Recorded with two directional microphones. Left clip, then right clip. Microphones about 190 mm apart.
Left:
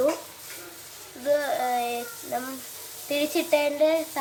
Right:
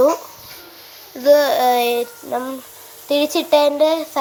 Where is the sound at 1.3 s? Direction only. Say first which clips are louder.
Right 12 dB; 35° right (ahead or behind).